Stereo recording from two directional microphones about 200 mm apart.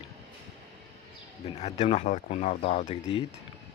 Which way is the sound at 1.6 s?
30° left (ahead or behind).